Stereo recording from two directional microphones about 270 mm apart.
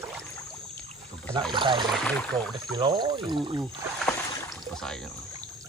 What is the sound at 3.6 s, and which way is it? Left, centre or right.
Speech, centre.